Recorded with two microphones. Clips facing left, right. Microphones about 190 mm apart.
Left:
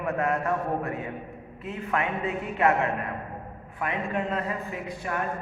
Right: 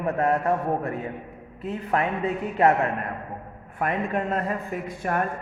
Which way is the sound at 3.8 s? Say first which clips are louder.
Right 3 dB; 45° right (ahead or behind).